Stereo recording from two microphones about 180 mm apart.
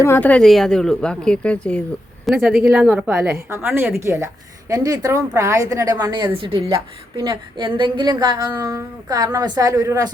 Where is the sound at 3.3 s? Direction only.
15° right (ahead or behind).